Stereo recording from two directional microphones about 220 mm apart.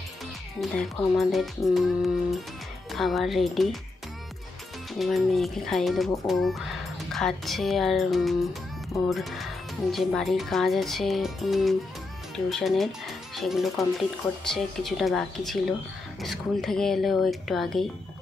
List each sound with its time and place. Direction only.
0.6 s speech: centre (ahead or behind)
4.9 s speech: centre (ahead or behind)